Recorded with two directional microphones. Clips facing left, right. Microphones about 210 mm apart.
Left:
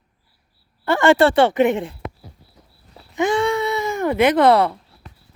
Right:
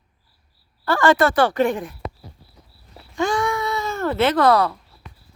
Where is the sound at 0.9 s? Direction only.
25° left (ahead or behind).